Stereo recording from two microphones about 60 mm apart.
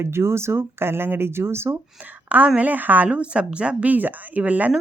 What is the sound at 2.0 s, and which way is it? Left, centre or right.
A woman's voice, right.